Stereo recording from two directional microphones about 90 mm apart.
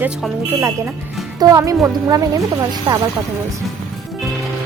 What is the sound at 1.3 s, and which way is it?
Speech, 40° right (ahead or behind).